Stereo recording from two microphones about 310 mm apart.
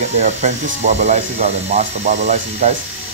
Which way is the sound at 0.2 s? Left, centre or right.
Right.